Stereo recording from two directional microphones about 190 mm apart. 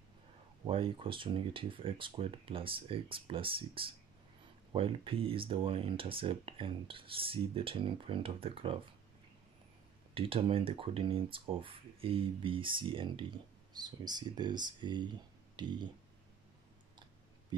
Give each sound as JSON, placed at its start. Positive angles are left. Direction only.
{"t": 0.7, "sound": "speech", "side_deg": -30}
{"t": 10.1, "sound": "speech", "side_deg": -30}